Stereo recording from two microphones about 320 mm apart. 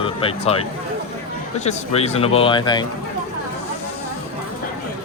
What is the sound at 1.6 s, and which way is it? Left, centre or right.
Speech, centre.